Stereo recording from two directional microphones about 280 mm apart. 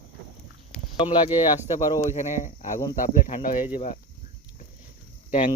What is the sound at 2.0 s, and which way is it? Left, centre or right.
Speech, left.